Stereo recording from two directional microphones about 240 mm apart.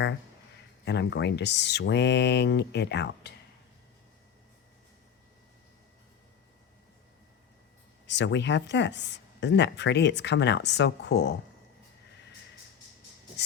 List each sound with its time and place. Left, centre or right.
0.9 s speech: left
8.0 s speech: left